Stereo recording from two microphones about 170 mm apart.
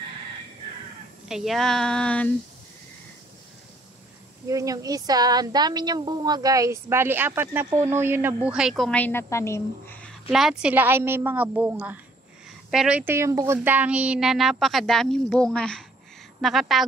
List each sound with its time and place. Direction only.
1.3 s a woman's voice: centre (ahead or behind)
4.5 s a woman's voice: 20° right (ahead or behind); by 9.9 s 15° left (ahead or behind)
10.6 s a woman's voice: 10° right (ahead or behind)